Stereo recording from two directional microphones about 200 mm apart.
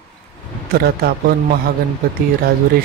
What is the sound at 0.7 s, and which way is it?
Speech, 50° right (ahead or behind).